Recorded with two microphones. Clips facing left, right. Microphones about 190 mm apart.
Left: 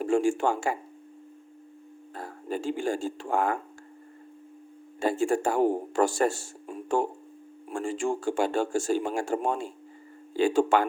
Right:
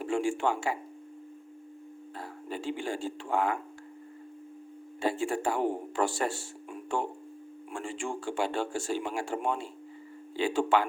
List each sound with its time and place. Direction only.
0.0 s speech: 45° left (ahead or behind)
2.1 s speech: 45° left (ahead or behind)
4.9 s speech: 45° left (ahead or behind)